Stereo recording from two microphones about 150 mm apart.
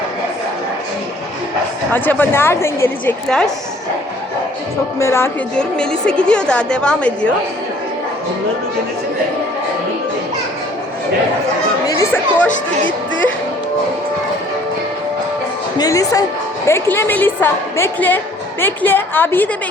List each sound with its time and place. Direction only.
1.9 s a woman's voice: 15° left (ahead or behind)
3.2 s speech: 5° left (ahead or behind)
4.9 s a woman's voice: 20° left (ahead or behind)
5.5 s a woman's voice: 5° left (ahead or behind)
11.9 s speech: 15° left (ahead or behind)
15.8 s a woman's voice: 25° left (ahead or behind)